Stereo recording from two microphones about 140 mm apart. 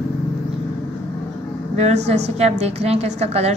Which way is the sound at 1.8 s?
50° right (ahead or behind).